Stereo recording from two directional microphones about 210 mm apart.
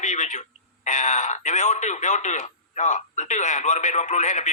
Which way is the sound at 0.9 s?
35° left (ahead or behind).